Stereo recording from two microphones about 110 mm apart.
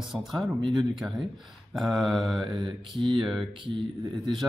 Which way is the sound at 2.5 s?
45° right (ahead or behind).